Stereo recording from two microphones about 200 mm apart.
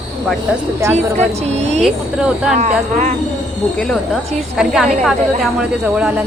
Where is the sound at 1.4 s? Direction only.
35° right (ahead or behind).